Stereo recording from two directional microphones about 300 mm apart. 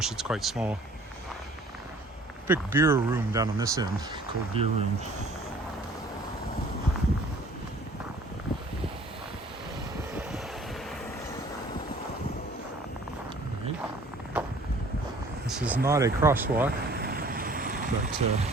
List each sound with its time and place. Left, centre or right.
0.0 s speech: centre
2.5 s speech: centre
14.3 s a sound: centre
15.4 s speech: centre
16.9 s vehicle: right